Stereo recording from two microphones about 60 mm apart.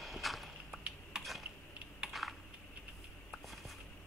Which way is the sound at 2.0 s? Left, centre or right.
Centre.